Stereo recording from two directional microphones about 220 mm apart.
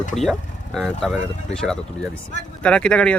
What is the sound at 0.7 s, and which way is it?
Speech, centre (ahead or behind).